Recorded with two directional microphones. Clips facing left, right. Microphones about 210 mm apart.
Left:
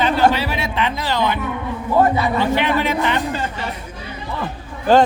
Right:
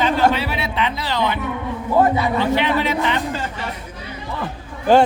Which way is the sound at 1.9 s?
15° right (ahead or behind).